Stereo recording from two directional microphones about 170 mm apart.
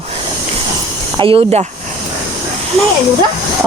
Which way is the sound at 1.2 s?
35° right (ahead or behind).